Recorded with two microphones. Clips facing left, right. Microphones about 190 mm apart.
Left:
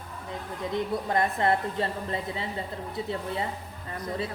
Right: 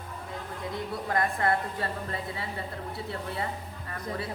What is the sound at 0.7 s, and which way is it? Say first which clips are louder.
A woman's voice: left 4 dB; 20° left (ahead or behind).